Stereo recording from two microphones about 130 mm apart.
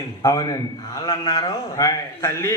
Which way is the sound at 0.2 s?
25° left (ahead or behind).